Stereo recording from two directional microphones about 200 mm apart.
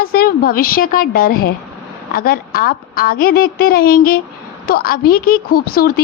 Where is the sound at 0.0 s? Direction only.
50° left (ahead or behind).